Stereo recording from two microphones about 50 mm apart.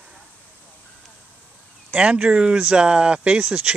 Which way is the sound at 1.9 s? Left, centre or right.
Right.